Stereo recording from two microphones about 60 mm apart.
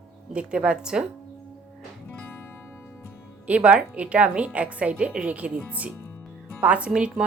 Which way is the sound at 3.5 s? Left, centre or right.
Right.